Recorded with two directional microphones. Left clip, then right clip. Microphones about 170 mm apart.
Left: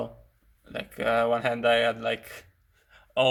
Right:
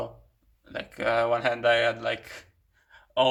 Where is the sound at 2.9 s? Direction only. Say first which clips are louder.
Right 1 dB; 50° left (ahead or behind).